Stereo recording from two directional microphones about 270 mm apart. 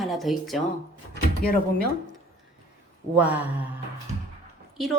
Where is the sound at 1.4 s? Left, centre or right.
Left.